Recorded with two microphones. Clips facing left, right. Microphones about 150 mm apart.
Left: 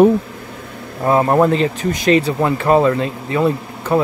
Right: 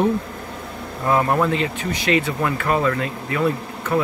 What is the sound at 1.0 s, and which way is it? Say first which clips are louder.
Speech: left 5 dB; 30° left (ahead or behind).